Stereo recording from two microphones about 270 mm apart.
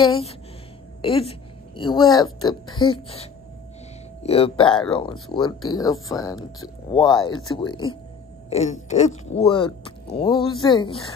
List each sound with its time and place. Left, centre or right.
0.1 s speech: left
4.2 s speech: left
8.5 s wail: left
8.8 s speech: left